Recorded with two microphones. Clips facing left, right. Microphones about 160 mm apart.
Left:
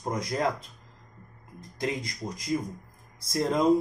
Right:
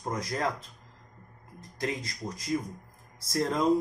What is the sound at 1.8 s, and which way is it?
Speech, 15° left (ahead or behind).